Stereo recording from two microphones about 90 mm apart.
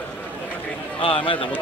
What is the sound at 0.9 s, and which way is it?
Speech, 70° left (ahead or behind).